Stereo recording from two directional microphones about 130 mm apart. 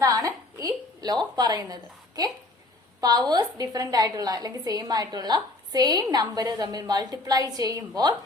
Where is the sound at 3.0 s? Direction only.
30° right (ahead or behind).